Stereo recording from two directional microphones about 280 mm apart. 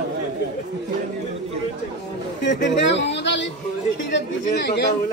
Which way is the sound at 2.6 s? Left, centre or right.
Left.